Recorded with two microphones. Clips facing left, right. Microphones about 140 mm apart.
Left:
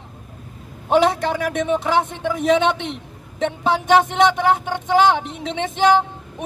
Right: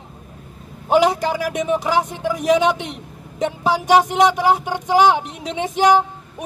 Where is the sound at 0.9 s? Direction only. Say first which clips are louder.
Right 1 dB; 5° right (ahead or behind).